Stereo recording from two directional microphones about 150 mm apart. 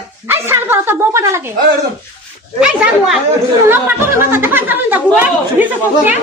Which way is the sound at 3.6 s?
15° right (ahead or behind).